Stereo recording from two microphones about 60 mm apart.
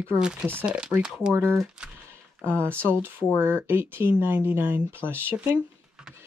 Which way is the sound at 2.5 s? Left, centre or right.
Right.